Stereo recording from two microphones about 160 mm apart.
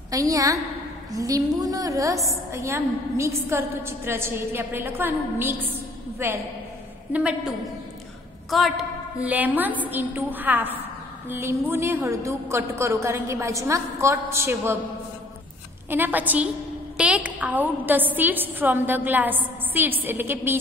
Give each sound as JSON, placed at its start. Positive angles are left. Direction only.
{"t": 0.1, "sound": "a woman's voice", "side_deg": -20}
{"t": 15.9, "sound": "a woman's voice", "side_deg": -10}